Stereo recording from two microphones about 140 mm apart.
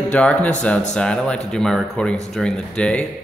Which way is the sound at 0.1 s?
10° left (ahead or behind).